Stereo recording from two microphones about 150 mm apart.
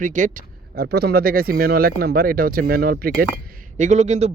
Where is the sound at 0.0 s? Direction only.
60° right (ahead or behind); by 3.2 s 90° right.